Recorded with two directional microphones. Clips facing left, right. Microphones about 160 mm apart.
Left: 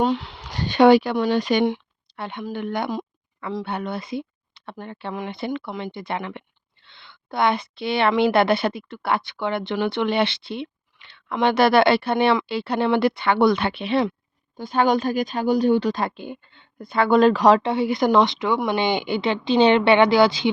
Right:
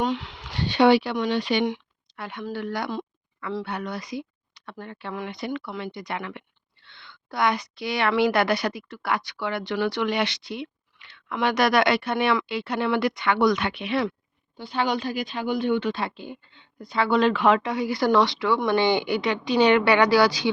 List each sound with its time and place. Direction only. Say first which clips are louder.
0.0 s speech: left 4 dB; 35° left (ahead or behind)
1.6 s a sound: left 4 dB; 30° left (ahead or behind)
2.4 s a woman's voice: left 3 dB; 20° left (ahead or behind)
14.5 s speech: left 6 dB; 45° left (ahead or behind); by 20.5 s 25° left (ahead or behind)